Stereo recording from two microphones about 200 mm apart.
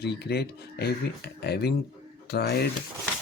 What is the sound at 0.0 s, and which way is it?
Speech, 55° left (ahead or behind).